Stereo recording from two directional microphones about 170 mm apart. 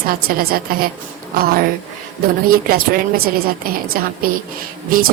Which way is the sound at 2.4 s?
60° right (ahead or behind).